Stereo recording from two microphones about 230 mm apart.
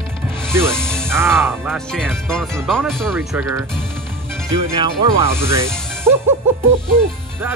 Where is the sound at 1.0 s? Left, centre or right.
Centre.